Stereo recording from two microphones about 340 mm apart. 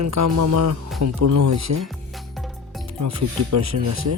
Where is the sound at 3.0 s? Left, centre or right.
Right.